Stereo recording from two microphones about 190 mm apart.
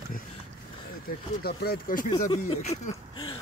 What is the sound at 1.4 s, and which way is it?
Speech, 55° left (ahead or behind).